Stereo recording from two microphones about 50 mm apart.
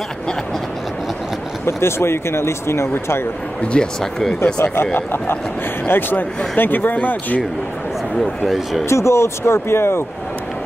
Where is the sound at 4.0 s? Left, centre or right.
Centre.